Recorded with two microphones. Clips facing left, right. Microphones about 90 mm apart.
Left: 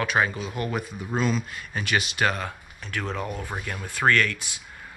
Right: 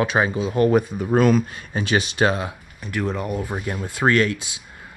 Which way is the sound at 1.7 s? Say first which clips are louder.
Right 5 dB; 25° right (ahead or behind).